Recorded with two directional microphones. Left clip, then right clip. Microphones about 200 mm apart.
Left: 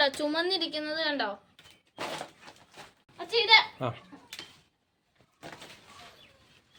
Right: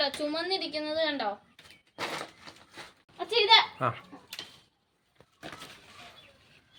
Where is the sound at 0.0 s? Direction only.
45° left (ahead or behind).